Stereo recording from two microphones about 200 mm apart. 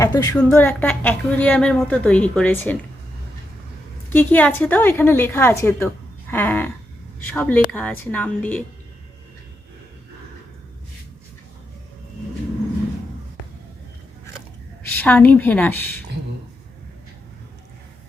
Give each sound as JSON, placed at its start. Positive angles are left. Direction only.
{"t": 0.0, "sound": "a woman's voice", "side_deg": 15}
{"t": 4.1, "sound": "a woman's voice", "side_deg": 10}
{"t": 14.8, "sound": "a woman's voice", "side_deg": 10}